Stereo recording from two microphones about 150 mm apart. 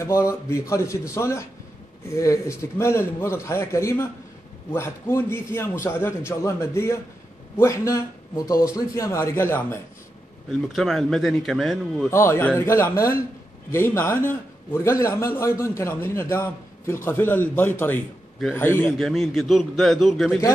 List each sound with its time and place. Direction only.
0.0 s a man's voice: 20° left (ahead or behind)
10.7 s a man's voice: centre (ahead or behind)
12.1 s a man's voice: 15° left (ahead or behind)
18.9 s a man's voice: centre (ahead or behind)